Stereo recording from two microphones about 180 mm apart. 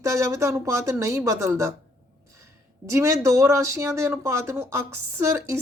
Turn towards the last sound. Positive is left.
turn(degrees=-15)  # may be behind; listen again after turning